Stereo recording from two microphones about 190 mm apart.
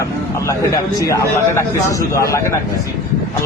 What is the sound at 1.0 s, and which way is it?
A man's voice, 15° left (ahead or behind).